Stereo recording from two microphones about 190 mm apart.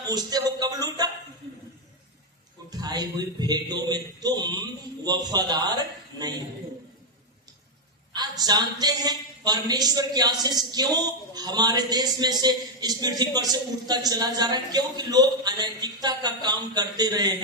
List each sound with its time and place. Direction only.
0.1 s a man's voice: 20° right (ahead or behind)
2.6 s a man's voice: 20° right (ahead or behind)
8.1 s a man's voice: 20° right (ahead or behind)